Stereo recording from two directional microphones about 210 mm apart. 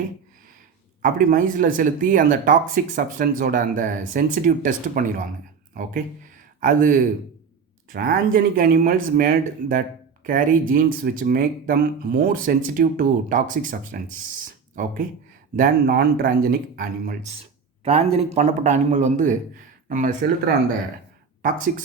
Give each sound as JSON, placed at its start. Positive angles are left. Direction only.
{"t": 1.0, "sound": "speech", "side_deg": -40}
{"t": 14.4, "sound": "a sound", "side_deg": -40}
{"t": 15.5, "sound": "speech", "side_deg": -40}
{"t": 17.8, "sound": "speech", "side_deg": -30}